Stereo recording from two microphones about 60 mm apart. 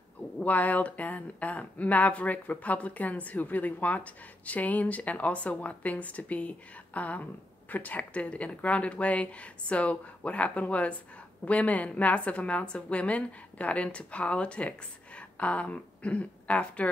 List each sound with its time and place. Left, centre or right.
0.4 s speech: left